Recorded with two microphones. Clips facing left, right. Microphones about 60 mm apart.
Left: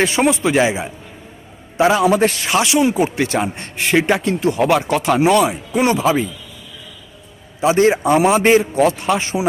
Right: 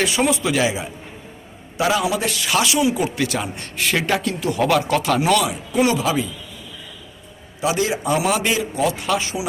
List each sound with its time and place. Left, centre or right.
0.0 s speech: left
2.0 s a man's voice: left
7.6 s a man's voice: left